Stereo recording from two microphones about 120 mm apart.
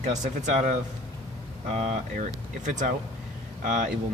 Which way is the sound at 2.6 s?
90° right.